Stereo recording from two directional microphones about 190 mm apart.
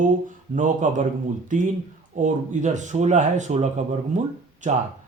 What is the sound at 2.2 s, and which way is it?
Speech, 40° right (ahead or behind).